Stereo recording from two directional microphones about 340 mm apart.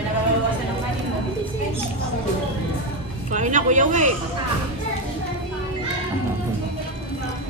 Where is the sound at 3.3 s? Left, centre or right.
Right.